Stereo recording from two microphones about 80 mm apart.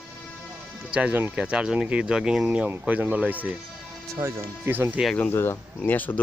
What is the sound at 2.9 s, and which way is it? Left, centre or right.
Speech, centre.